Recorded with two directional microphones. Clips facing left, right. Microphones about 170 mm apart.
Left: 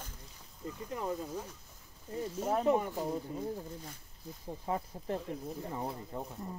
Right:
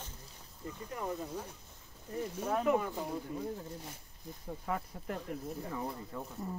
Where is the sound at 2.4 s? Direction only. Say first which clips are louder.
Left 2 dB; 30° left (ahead or behind).